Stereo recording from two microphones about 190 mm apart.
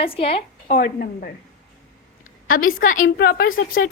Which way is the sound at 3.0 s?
55° left (ahead or behind).